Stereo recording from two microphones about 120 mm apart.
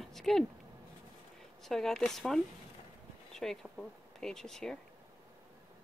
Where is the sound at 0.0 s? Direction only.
5° left (ahead or behind).